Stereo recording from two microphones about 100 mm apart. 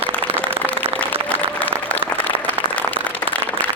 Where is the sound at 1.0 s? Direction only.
15° left (ahead or behind).